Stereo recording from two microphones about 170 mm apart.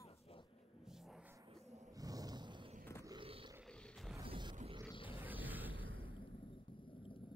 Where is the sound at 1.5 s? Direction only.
40° right (ahead or behind).